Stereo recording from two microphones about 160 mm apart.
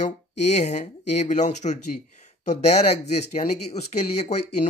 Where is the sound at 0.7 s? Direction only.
50° left (ahead or behind).